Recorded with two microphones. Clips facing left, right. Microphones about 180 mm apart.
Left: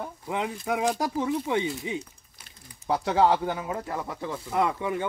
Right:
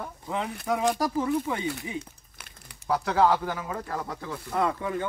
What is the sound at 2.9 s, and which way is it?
Speech, 25° left (ahead or behind).